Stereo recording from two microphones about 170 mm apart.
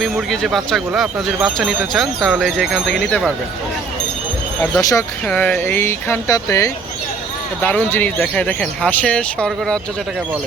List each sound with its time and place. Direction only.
0.0 s speech: centre (ahead or behind)
4.8 s speech: 20° left (ahead or behind)
5.2 s speech: 5° left (ahead or behind)